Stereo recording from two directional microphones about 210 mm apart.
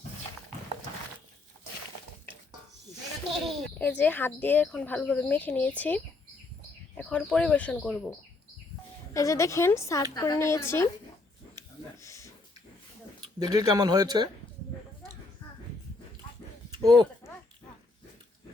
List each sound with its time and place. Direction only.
3.2 s speech: centre (ahead or behind)
9.1 s speech: 15° left (ahead or behind)
12.0 s a sound: 15° left (ahead or behind)
13.4 s speech: 20° right (ahead or behind)